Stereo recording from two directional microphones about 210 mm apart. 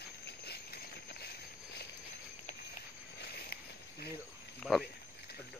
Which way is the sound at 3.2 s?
50° left (ahead or behind).